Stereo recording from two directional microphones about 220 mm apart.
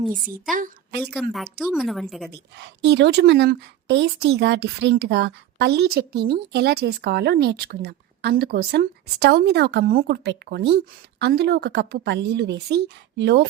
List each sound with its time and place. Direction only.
0.5 s a woman's voice: 40° right (ahead or behind)
1.0 s a woman's voice: centre (ahead or behind)
2.3 s speech: 50° right (ahead or behind)